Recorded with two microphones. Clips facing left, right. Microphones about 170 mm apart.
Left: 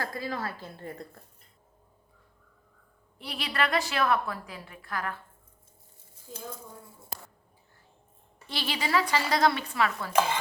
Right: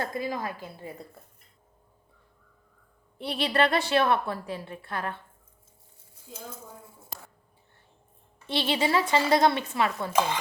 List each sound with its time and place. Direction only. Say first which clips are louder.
0.0 s a woman's voice: right 3 dB; 20° right (ahead or behind)
3.2 s a woman's voice: right 6 dB; 25° right (ahead or behind)
8.4 s a woman's voice: right 6 dB; 25° right (ahead or behind)